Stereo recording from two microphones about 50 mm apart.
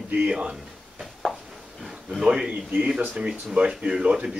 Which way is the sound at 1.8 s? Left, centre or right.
Centre.